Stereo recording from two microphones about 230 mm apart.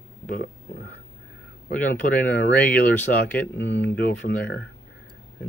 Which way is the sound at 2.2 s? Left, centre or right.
Left.